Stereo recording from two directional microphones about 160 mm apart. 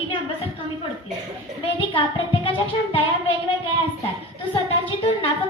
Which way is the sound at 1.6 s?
35° left (ahead or behind).